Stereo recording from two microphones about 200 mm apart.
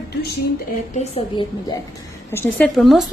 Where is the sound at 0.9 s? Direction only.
30° left (ahead or behind).